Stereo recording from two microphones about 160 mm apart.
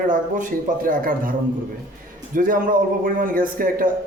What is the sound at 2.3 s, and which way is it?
Speech, 60° right (ahead or behind).